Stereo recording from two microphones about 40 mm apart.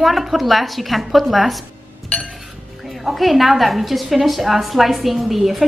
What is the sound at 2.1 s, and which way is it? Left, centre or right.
Chink, left.